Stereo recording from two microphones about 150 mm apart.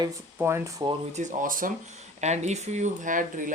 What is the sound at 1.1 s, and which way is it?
Speech, 60° right (ahead or behind).